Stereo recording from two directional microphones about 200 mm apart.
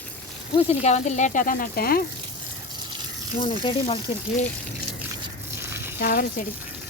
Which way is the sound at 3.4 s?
25° left (ahead or behind).